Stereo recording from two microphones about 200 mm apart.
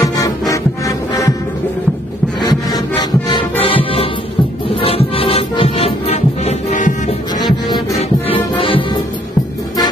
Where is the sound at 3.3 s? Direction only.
25° left (ahead or behind).